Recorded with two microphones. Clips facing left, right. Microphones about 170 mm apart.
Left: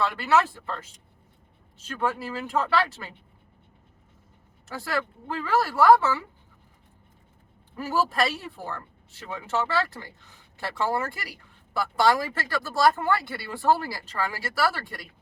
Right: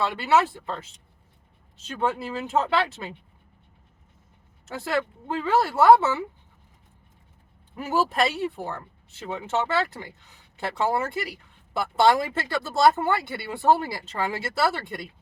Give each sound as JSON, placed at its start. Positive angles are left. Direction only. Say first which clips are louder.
{"t": 0.0, "sound": "speech", "louder": "right 1 dB", "side_deg": -20}
{"t": 4.7, "sound": "speech", "louder": "right 3 dB", "side_deg": -20}
{"t": 7.8, "sound": "speech", "louder": "right 2 dB", "side_deg": -20}